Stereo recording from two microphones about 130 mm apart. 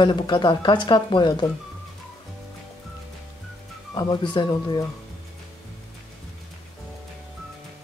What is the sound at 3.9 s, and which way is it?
Speech, 35° left (ahead or behind).